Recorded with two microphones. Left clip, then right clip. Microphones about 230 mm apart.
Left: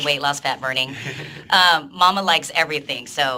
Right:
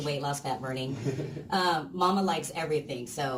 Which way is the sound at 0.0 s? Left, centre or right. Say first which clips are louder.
Left 12 dB; left.